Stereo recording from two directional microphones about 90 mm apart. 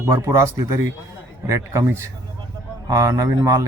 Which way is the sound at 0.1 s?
35° right (ahead or behind).